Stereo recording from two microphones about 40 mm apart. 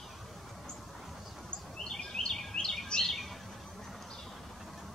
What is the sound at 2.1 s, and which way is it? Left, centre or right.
Bird vocalization, centre.